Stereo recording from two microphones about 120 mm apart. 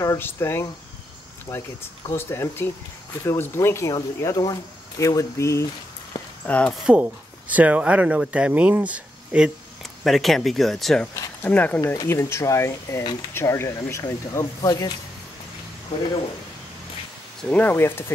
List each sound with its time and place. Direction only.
0.0 s speech: 25° left (ahead or behind)
6.4 s speech: 10° left (ahead or behind)
6.9 s speech: 10° right (ahead or behind)
10.0 s speech: centre (ahead or behind)
11.4 s speech: 15° left (ahead or behind)
11.8 s speech: 25° left (ahead or behind)
17.4 s speech: 10° left (ahead or behind)